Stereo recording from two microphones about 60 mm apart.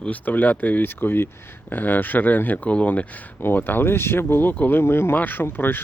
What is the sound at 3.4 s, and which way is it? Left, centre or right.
Speech, left.